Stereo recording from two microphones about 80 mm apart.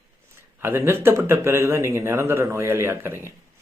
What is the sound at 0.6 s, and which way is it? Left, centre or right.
A man's voice, right.